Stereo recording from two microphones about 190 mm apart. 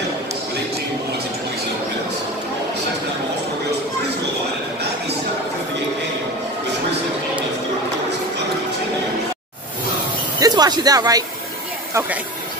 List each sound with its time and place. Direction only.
10.4 s speech: 20° right (ahead or behind)